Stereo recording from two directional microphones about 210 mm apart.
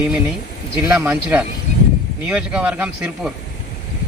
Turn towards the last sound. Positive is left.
turn(degrees=-5)  # may be behind; listen again after turning